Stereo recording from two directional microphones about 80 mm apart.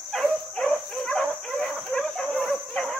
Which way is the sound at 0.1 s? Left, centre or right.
Centre.